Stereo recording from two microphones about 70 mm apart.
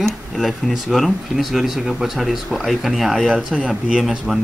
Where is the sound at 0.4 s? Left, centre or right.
Centre.